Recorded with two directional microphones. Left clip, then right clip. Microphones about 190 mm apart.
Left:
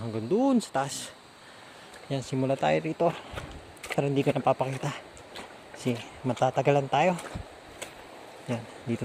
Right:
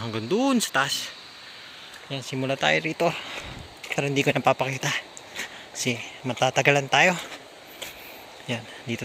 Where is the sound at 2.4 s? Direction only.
10° left (ahead or behind).